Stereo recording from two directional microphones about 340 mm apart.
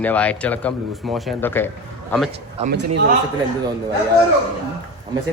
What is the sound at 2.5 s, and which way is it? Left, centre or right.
Speech, right.